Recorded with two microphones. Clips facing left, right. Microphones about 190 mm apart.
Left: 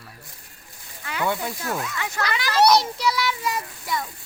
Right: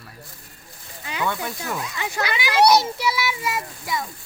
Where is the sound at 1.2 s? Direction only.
15° left (ahead or behind).